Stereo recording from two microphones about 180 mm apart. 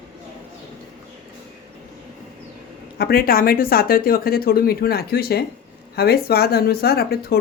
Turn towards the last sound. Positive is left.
turn(degrees=60)  # may be behind; listen again after turning